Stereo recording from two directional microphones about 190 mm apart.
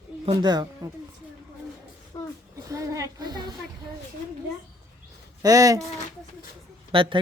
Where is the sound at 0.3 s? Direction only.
20° right (ahead or behind).